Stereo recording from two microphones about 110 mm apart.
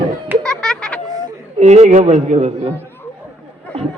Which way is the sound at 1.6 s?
90° right.